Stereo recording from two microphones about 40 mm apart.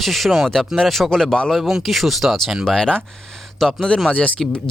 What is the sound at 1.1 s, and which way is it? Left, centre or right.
Speech, centre.